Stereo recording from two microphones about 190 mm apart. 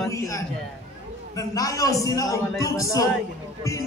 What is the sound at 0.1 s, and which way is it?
A woman's voice, 15° left (ahead or behind).